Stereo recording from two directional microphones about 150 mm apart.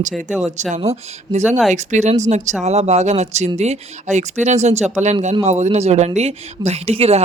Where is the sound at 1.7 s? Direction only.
50° right (ahead or behind).